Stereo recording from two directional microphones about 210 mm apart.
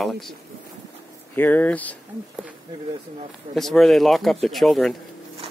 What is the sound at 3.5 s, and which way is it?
Speech, centre (ahead or behind).